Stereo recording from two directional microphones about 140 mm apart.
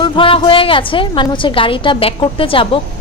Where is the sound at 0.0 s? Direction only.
40° left (ahead or behind).